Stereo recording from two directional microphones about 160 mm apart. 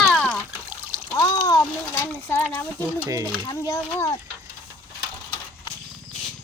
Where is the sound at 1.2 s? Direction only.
20° left (ahead or behind).